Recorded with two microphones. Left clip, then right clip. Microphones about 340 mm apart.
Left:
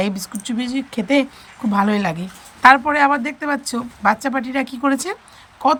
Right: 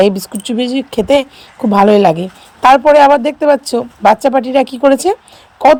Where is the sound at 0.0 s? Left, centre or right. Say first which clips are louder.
Right 12 dB; centre.